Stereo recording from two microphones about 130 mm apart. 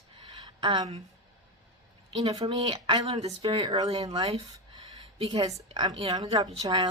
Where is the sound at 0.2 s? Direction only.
35° right (ahead or behind).